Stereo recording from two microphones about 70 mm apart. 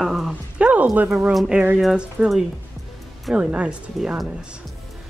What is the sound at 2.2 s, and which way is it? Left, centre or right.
Speech, right.